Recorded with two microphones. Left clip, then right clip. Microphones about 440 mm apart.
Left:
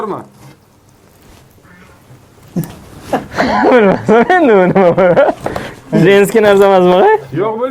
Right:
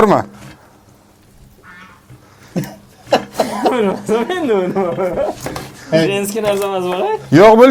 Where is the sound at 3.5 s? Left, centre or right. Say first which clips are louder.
Left 9 dB; left.